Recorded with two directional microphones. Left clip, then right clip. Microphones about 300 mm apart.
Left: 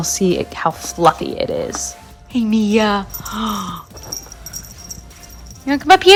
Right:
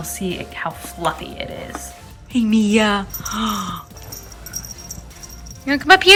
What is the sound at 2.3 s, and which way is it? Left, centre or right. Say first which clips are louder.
Speech: left 1 dB; centre.